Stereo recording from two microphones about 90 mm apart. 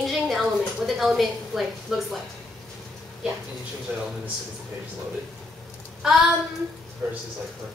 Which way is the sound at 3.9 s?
15° right (ahead or behind).